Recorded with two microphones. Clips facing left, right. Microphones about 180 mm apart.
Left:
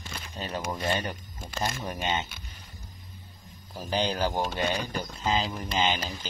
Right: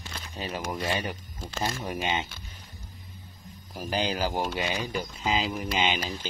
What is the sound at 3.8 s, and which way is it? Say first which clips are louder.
Speech: left 1 dB; 5° right (ahead or behind).